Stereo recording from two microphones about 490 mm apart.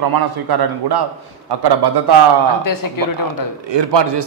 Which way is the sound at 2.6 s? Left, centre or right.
Left.